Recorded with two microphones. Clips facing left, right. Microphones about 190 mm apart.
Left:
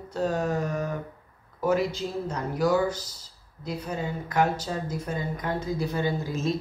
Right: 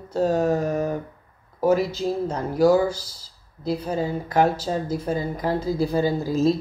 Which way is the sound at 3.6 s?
30° right (ahead or behind).